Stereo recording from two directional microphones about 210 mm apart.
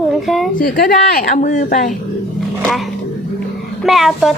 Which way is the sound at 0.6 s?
45° left (ahead or behind).